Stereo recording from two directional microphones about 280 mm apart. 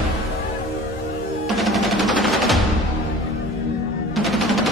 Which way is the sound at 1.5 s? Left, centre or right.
Centre.